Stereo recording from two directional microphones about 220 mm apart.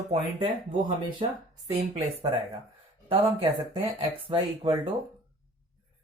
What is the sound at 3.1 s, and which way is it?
Speech, 25° right (ahead or behind).